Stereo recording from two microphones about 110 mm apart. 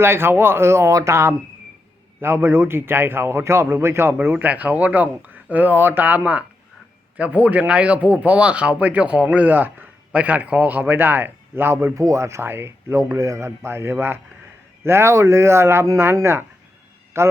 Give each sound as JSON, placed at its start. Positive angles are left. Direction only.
{"t": 0.0, "sound": "speech", "side_deg": -20}